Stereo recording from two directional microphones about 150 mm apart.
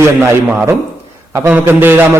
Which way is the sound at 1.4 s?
15° right (ahead or behind).